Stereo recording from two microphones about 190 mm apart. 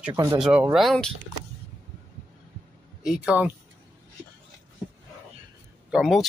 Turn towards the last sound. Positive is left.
turn(degrees=0)  # may be behind; listen again after turning